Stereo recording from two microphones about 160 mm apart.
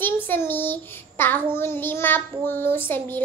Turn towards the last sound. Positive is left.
turn(degrees=15)  # may be behind; listen again after turning